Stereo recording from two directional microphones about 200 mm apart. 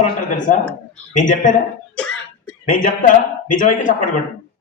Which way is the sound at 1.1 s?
40° left (ahead or behind).